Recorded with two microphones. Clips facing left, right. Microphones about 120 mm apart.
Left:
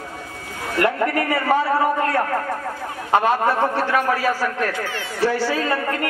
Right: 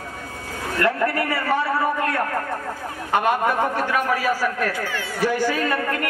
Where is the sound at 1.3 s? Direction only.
25° left (ahead or behind).